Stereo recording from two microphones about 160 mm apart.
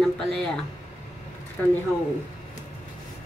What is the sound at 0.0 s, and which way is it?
Speech, 5° left (ahead or behind).